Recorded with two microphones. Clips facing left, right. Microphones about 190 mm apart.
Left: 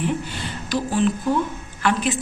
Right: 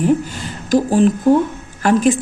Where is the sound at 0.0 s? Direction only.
45° right (ahead or behind).